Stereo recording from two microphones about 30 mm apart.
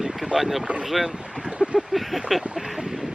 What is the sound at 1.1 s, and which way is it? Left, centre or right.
Boat, right.